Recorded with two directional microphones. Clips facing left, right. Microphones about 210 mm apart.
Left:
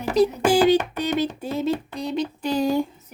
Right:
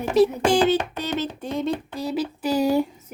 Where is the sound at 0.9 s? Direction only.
15° left (ahead or behind); by 2.9 s 10° right (ahead or behind).